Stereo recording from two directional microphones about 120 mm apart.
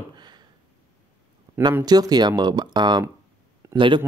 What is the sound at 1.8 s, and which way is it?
A man's voice, 35° right (ahead or behind).